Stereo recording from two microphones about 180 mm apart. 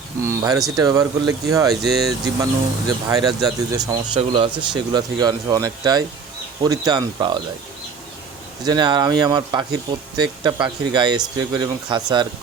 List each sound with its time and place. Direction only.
0.3 s speech: 15° right (ahead or behind)
8.6 s speech: 25° right (ahead or behind)